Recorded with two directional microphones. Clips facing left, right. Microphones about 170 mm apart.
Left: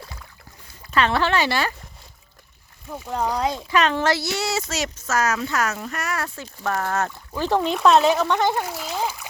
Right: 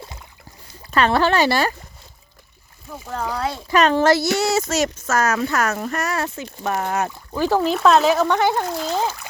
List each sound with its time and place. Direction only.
0.0 s boat: 20° right (ahead or behind)
0.9 s speech: 40° right (ahead or behind)
3.1 s speech: 15° left (ahead or behind)
3.7 s speech: 40° right (ahead or behind)
6.1 s speech: 20° right (ahead or behind)
8.6 s a child's voice: 5° left (ahead or behind)